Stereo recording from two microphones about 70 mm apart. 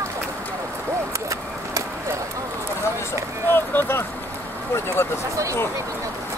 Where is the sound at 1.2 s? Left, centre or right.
Right.